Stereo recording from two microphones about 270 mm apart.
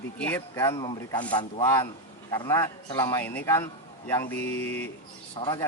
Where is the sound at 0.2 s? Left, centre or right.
Centre.